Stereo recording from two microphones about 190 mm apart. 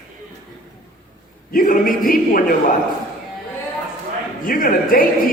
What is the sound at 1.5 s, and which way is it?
A man's voice, 45° left (ahead or behind).